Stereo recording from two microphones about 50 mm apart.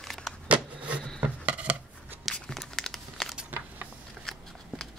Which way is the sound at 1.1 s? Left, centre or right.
Right.